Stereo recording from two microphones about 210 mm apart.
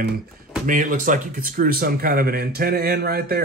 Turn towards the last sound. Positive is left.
turn(degrees=-45)  # may be behind; listen again after turning